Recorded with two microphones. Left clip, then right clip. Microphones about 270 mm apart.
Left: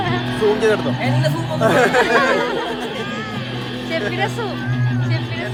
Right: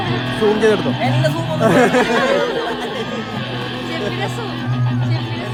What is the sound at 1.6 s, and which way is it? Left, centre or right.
Speech, right.